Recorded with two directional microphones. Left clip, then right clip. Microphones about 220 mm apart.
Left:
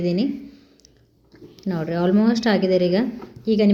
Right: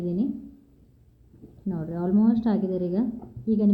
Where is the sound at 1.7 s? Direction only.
25° left (ahead or behind).